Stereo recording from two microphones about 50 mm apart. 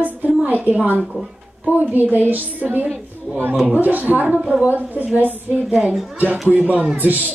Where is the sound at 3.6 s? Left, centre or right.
Right.